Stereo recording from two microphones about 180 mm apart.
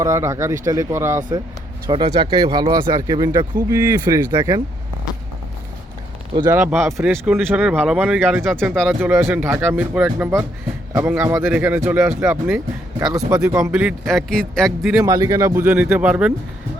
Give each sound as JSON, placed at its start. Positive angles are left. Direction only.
{"t": 0.0, "sound": "speech", "side_deg": -15}
{"t": 6.5, "sound": "speech", "side_deg": -5}
{"t": 9.0, "sound": "speech", "side_deg": -10}
{"t": 15.0, "sound": "speech", "side_deg": -20}